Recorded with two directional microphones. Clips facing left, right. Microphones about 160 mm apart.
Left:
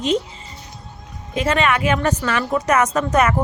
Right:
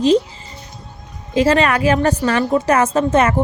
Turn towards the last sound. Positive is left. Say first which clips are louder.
# right 3 dB
turn(degrees=-30)  # may be behind; listen again after turning